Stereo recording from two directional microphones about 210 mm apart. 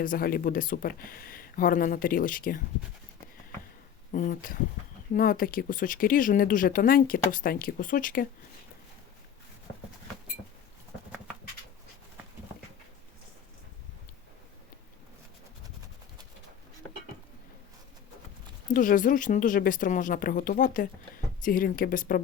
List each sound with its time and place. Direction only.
0.0 s speech: 45° left (ahead or behind)
4.1 s speech: 40° left (ahead or behind)
18.7 s speech: 40° left (ahead or behind)